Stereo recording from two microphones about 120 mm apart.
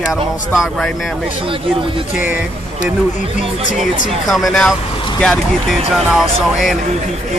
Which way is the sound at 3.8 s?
Centre (ahead or behind).